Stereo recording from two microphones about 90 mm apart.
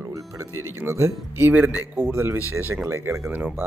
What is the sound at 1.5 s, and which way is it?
Speech, 20° right (ahead or behind).